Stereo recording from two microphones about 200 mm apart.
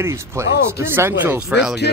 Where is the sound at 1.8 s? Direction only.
55° left (ahead or behind).